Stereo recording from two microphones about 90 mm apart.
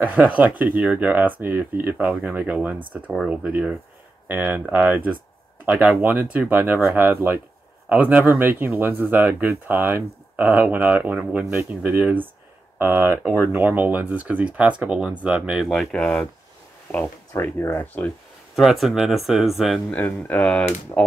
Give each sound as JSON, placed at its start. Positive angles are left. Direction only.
{"t": 0.0, "sound": "speech", "side_deg": -15}
{"t": 15.6, "sound": "speech", "side_deg": 5}
{"t": 17.4, "sound": "speech", "side_deg": 25}
{"t": 18.6, "sound": "speech", "side_deg": 0}
{"t": 19.9, "sound": "speech", "side_deg": 15}